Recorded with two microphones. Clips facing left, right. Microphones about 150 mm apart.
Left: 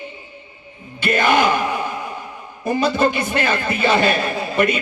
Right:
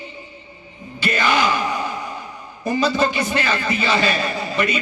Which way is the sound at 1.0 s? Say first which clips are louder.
Left 3 dB; 55° left (ahead or behind).